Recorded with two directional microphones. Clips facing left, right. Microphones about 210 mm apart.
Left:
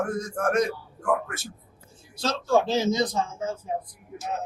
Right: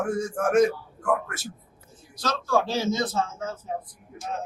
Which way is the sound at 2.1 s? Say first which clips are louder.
Left 2 dB; 25° left (ahead or behind).